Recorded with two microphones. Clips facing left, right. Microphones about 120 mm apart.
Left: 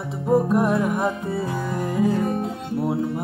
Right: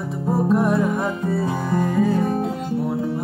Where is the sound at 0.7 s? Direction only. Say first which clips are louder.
Right 1 dB; 15° left (ahead or behind).